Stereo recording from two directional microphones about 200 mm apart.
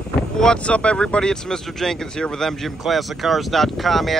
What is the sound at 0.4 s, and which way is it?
Speech, 5° left (ahead or behind).